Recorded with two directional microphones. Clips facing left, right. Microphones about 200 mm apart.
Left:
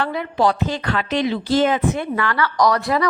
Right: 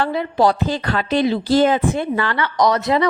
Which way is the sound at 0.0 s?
30° right (ahead or behind).